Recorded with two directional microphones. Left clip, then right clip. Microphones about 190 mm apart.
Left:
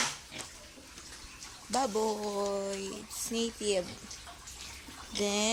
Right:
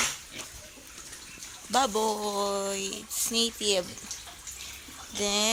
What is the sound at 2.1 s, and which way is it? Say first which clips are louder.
Speech: right 4 dB; 20° right (ahead or behind).